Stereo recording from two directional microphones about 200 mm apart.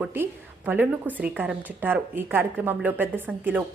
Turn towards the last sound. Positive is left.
turn(degrees=-10)  # may be behind; listen again after turning